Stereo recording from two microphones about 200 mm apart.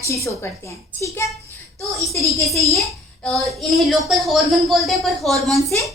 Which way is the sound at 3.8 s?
Centre (ahead or behind).